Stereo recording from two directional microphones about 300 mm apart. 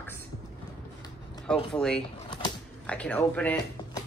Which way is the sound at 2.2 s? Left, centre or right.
Centre.